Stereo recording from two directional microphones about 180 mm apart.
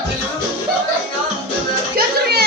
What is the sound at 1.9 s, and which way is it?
Music, 60° right (ahead or behind).